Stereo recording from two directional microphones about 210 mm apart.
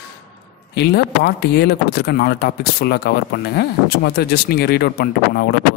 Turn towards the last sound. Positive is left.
turn(degrees=50)  # may be behind; listen again after turning